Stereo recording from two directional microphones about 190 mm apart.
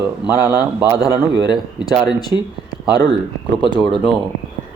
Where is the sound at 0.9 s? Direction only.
20° left (ahead or behind).